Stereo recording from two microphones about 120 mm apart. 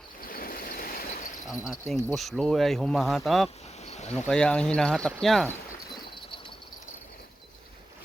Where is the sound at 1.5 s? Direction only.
Centre (ahead or behind).